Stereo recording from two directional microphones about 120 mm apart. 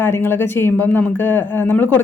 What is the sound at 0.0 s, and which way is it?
A woman's voice, 20° left (ahead or behind).